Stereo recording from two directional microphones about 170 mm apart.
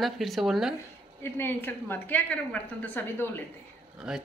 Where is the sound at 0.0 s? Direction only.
Centre (ahead or behind).